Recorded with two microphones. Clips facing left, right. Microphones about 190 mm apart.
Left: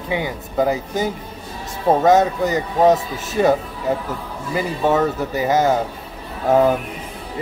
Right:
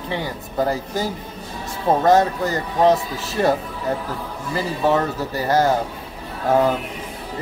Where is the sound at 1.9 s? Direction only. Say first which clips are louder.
Left 2 dB; 5° left (ahead or behind).